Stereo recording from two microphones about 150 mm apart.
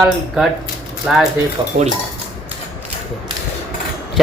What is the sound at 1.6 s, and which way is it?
Cutlery, 35° right (ahead or behind).